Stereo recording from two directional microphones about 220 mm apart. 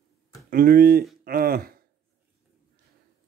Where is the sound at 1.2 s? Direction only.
40° right (ahead or behind).